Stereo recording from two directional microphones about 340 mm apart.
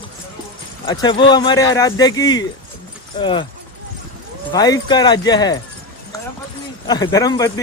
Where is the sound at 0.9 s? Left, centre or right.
Centre.